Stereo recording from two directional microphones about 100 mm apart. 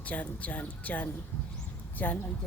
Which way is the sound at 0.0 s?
15° left (ahead or behind).